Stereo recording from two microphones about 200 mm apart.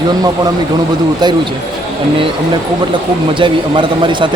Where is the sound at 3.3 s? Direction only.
25° right (ahead or behind).